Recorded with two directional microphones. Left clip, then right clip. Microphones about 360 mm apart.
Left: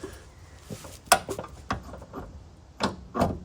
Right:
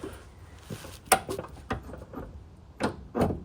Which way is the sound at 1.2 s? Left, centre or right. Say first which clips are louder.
Left 2 dB; centre.